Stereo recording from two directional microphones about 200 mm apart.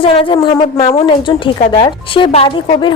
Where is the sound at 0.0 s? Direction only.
25° left (ahead or behind).